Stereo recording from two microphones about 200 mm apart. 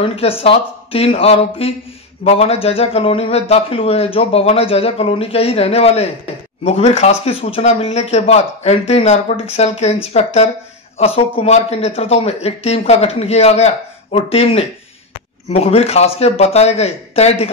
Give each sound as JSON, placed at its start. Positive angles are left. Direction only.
{"t": 0.0, "sound": "speech", "side_deg": 30}